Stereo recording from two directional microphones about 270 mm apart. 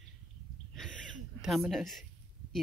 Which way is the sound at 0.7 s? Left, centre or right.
Centre.